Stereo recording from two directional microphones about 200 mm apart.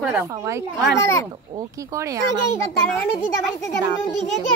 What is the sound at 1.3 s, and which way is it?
Speech, 20° right (ahead or behind).